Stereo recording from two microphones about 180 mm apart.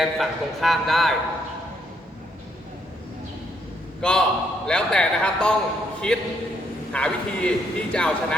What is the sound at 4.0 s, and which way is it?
Speech, 5° left (ahead or behind).